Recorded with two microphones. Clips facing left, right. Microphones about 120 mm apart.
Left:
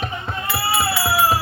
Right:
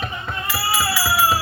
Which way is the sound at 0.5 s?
25° left (ahead or behind).